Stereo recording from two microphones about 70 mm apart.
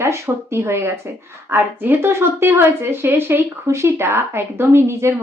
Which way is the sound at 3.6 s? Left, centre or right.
Right.